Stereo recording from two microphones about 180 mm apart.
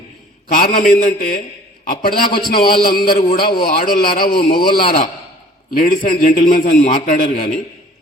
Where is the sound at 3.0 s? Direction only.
35° left (ahead or behind).